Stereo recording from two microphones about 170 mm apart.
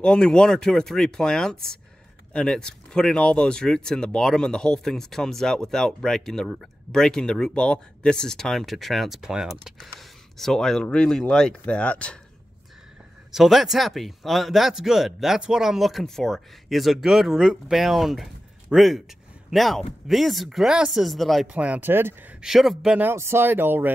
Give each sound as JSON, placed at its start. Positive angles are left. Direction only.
{"t": 0.0, "sound": "speech", "side_deg": 5}
{"t": 13.3, "sound": "speech", "side_deg": 0}